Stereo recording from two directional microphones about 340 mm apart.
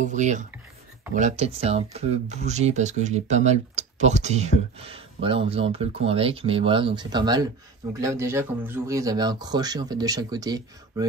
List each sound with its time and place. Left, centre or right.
0.0 s speech: right